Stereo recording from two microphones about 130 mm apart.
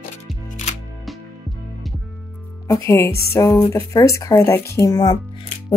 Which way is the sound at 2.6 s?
20° left (ahead or behind).